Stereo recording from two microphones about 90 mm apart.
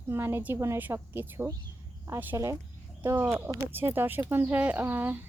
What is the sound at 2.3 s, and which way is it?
Speech, 35° right (ahead or behind).